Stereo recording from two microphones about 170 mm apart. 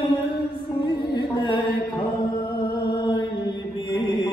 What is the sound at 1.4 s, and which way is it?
Mantra, 30° left (ahead or behind).